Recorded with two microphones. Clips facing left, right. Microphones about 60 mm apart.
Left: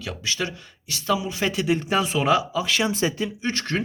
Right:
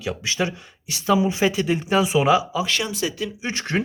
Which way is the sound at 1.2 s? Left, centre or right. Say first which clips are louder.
Right 9 dB; right.